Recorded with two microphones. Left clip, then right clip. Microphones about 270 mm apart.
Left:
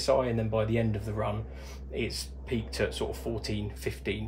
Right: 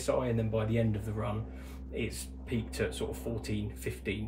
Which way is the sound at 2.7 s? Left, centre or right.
Left.